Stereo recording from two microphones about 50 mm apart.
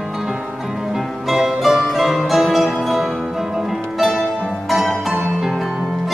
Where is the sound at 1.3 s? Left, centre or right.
Centre.